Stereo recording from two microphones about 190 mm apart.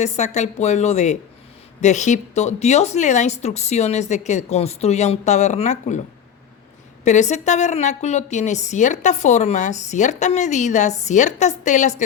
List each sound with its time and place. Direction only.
0.0 s a woman's voice: 35° left (ahead or behind)
7.0 s a woman's voice: 40° left (ahead or behind)